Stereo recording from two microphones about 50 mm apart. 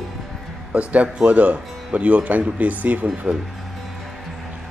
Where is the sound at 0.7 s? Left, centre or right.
Right.